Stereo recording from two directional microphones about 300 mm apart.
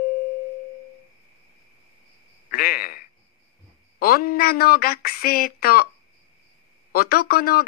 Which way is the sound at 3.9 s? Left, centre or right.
Left.